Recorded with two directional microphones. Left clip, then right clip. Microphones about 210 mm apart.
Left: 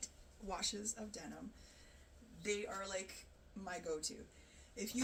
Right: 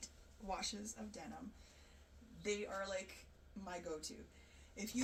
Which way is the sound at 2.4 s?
15° left (ahead or behind).